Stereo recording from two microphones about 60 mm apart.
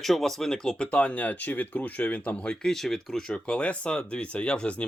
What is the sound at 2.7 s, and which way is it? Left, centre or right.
Speech, centre.